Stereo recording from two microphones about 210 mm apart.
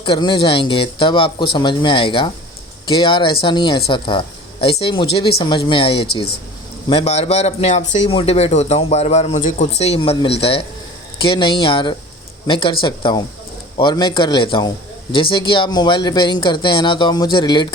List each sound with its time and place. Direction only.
0.0 s a man's voice: 25° left (ahead or behind)